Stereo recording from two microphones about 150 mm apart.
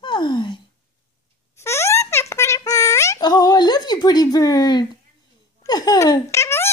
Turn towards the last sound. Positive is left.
turn(degrees=20)  # may be behind; listen again after turning